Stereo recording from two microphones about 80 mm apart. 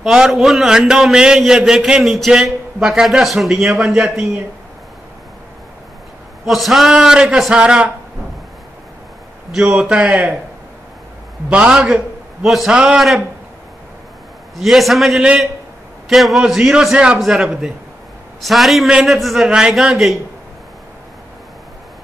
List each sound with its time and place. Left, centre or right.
0.0 s a man's voice: centre
6.4 s a man's voice: centre
9.8 s a man's voice: centre
11.4 s a man's voice: centre
14.6 s a man's voice: centre
19.4 s a man's voice: centre